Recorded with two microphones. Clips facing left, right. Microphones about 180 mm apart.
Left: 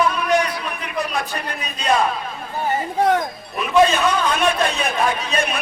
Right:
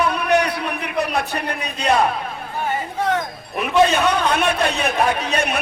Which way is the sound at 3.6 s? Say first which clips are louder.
Even; 60° right (ahead or behind).